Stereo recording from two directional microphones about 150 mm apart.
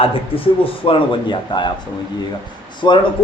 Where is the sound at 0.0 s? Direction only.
35° left (ahead or behind).